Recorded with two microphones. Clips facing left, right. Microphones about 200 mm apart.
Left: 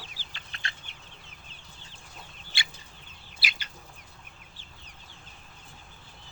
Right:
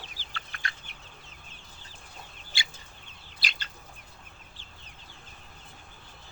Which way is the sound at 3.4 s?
10° left (ahead or behind).